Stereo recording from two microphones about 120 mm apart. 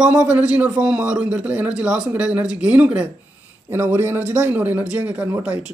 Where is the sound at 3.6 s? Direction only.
20° right (ahead or behind).